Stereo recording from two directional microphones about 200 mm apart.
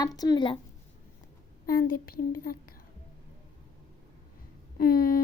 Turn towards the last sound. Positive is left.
turn(degrees=45)  # may be behind; listen again after turning